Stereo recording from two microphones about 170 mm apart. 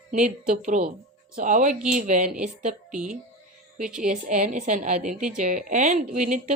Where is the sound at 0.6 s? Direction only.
50° right (ahead or behind).